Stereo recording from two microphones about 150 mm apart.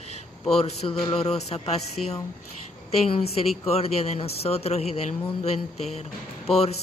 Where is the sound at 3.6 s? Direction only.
45° left (ahead or behind).